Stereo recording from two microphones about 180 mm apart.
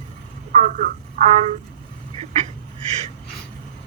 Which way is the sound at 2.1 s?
35° right (ahead or behind).